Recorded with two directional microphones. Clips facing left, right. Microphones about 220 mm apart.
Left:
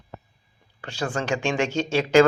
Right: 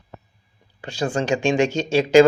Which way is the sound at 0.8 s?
15° right (ahead or behind).